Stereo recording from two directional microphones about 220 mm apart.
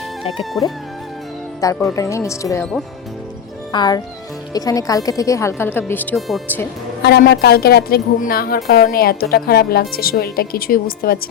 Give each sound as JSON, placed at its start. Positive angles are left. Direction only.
{"t": 0.6, "sound": "a woman's voice", "side_deg": 15}
{"t": 3.7, "sound": "a woman's voice", "side_deg": 20}
{"t": 7.0, "sound": "a woman's voice", "side_deg": 45}